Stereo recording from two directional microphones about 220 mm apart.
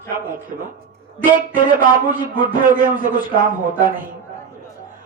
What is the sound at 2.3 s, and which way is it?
Speech, 40° right (ahead or behind).